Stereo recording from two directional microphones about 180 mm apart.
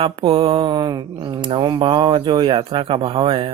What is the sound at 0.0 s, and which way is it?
Speech, 30° right (ahead or behind).